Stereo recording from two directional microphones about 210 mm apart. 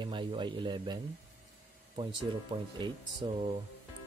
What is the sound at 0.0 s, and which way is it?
Speech, 20° right (ahead or behind).